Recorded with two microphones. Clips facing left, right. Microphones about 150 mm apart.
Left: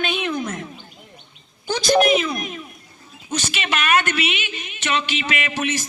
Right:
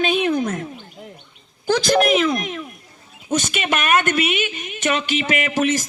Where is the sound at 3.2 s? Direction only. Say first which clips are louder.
Right 5 dB; 50° right (ahead or behind).